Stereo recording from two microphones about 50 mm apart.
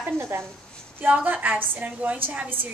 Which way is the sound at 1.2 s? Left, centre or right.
Right.